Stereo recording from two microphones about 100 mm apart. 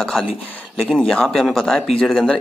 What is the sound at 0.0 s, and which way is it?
Speech, centre (ahead or behind).